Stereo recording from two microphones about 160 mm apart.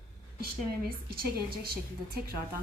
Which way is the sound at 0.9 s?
70° right (ahead or behind).